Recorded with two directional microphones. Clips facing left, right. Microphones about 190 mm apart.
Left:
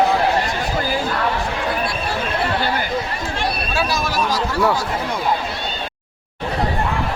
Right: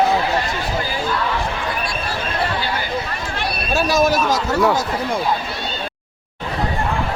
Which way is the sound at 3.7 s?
45° right (ahead or behind).